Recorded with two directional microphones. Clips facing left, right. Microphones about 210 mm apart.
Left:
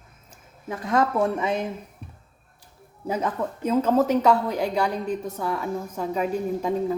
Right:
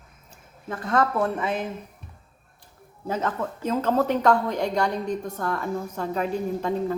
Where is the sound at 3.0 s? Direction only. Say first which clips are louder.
Left 1 dB; 10° left (ahead or behind).